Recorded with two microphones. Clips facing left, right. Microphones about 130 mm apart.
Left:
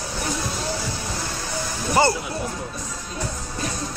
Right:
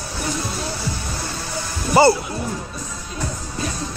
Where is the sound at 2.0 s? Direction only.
5° right (ahead or behind).